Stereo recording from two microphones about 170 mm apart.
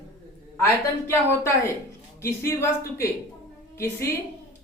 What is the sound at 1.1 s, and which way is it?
A woman's voice, 15° left (ahead or behind).